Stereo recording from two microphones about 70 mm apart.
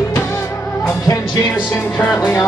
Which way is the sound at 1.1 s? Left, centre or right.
Left.